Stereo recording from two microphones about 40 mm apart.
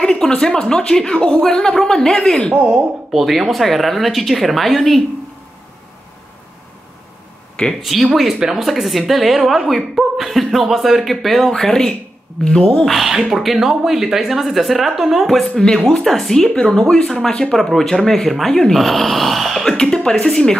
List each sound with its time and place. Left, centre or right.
0.4 s speech: centre
2.5 s a woman's voice: right
3.1 s a woman's voice: centre
7.8 s a woman's voice: centre; by 12.8 s left
12.8 s a woman's voice: centre
15.2 s a woman's voice: centre
19.8 s speech: centre
20.2 s speech: centre